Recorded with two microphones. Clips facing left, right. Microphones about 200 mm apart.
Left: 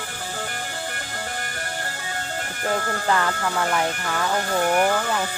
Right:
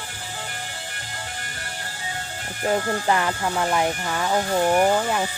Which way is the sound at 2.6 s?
20° right (ahead or behind).